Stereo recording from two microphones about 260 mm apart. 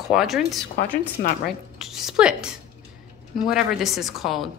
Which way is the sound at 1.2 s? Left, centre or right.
Left.